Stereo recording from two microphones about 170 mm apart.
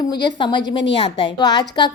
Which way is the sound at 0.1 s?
25° left (ahead or behind).